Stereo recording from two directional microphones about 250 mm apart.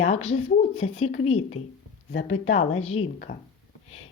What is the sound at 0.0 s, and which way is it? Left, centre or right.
Speech, left.